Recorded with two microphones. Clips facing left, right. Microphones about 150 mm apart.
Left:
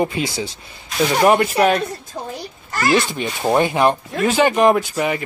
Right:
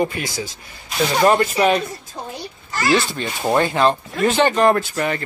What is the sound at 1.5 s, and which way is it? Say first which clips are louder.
Speech: left 1 dB; centre (ahead or behind).